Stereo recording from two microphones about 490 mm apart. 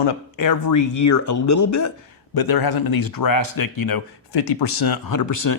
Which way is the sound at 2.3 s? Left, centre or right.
Left.